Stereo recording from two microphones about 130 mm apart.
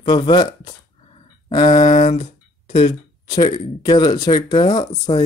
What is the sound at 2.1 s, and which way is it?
Speech, 50° left (ahead or behind).